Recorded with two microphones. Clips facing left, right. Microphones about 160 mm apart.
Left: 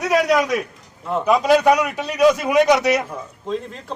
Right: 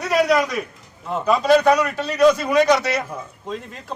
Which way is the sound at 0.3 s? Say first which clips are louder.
Left 1 dB; centre (ahead or behind).